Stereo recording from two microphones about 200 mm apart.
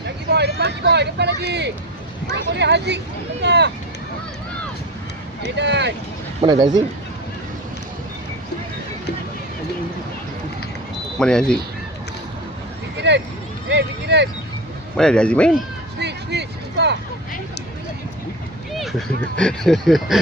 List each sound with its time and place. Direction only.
0.3 s vehicle: 55° right (ahead or behind)
0.6 s speech: 55° right (ahead or behind)
5.5 s speech: 60° right (ahead or behind)
6.5 s speech: 20° right (ahead or behind)
11.2 s speech: 5° left (ahead or behind)
13.0 s speech: 60° right (ahead or behind)
13.7 s a sound: 60° right (ahead or behind)
14.9 s speech: 5° left (ahead or behind)
16.0 s a sound: 55° right (ahead or behind)
18.7 s speech: centre (ahead or behind)